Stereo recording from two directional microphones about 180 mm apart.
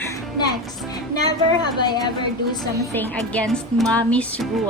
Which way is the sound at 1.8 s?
25° left (ahead or behind).